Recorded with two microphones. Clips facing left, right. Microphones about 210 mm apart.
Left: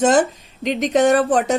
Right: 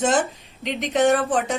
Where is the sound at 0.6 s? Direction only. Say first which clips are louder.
Left 4 dB; 45° left (ahead or behind).